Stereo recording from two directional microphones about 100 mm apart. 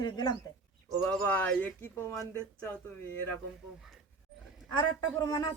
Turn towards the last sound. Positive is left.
turn(degrees=40)  # may be behind; listen again after turning